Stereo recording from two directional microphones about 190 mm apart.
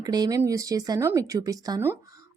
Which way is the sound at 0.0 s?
20° right (ahead or behind).